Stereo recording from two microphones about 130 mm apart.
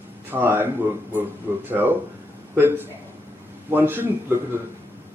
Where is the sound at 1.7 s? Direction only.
15° right (ahead or behind).